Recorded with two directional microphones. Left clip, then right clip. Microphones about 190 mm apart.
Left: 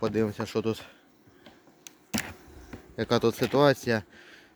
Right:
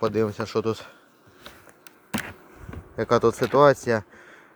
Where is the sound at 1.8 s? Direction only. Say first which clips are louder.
Right 2 dB; 5° left (ahead or behind).